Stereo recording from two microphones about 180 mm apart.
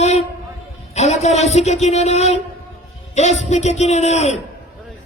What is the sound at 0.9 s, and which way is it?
Speech, 40° left (ahead or behind).